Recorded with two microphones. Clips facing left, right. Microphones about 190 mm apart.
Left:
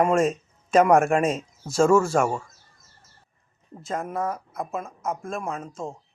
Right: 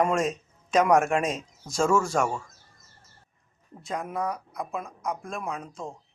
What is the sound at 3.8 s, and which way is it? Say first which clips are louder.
Speech: left 2 dB; centre (ahead or behind).